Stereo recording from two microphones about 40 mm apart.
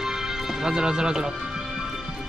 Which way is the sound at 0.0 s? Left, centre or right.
Centre.